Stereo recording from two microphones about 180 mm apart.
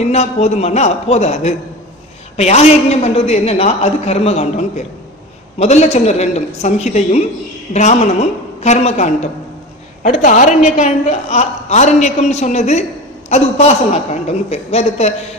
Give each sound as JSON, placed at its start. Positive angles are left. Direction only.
{"t": 0.1, "sound": "a woman's voice", "side_deg": 35}